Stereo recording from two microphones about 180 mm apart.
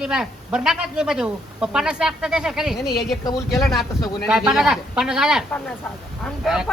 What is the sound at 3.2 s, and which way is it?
Speech, 15° left (ahead or behind).